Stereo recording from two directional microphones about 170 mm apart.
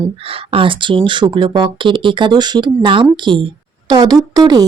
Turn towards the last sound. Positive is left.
turn(degrees=-20)  # may be behind; listen again after turning